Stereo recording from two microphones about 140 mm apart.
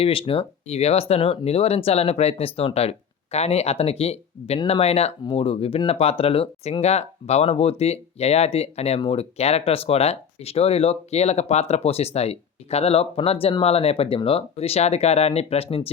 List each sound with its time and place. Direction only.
0.0 s speech: 40° left (ahead or behind)